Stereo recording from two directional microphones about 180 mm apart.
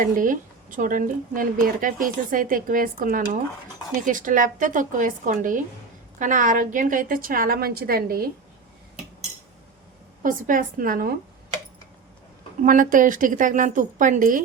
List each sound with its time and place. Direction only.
0.0 s a woman's voice: 45° right (ahead or behind)
10.2 s a woman's voice: 50° right (ahead or behind)
12.6 s a woman's voice: 50° right (ahead or behind)